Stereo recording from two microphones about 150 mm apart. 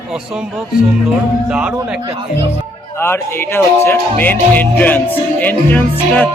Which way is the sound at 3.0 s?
15° left (ahead or behind).